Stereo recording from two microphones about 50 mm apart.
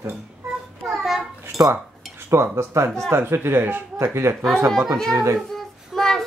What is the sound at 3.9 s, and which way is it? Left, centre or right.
Speech, right.